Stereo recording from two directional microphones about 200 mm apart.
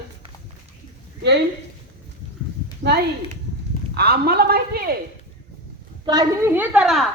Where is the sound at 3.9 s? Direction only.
50° right (ahead or behind).